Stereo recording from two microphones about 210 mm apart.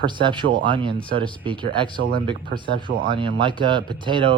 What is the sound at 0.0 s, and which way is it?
Speech, 20° right (ahead or behind).